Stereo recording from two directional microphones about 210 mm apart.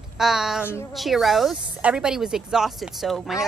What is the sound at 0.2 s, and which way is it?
A woman's voice, centre (ahead or behind).